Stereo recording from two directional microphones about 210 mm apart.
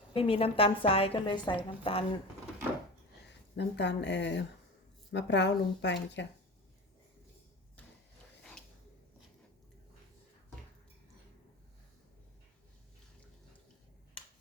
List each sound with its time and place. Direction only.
0.1 s a woman's voice: 25° left (ahead or behind)
3.2 s speech: 55° left (ahead or behind)